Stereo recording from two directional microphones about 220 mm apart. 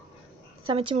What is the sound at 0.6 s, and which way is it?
Speech, 25° right (ahead or behind).